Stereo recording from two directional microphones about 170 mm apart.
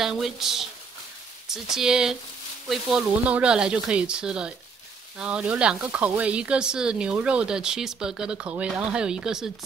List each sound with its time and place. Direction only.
0.0 s speech: centre (ahead or behind)
1.8 s speech: 5° right (ahead or behind)